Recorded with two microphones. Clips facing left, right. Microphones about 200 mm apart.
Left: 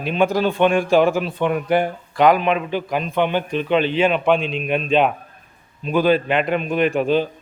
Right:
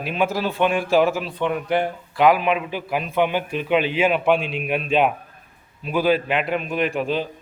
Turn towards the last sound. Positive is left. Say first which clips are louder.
# left 5 dB
turn(degrees=0)  # may be behind; listen again after turning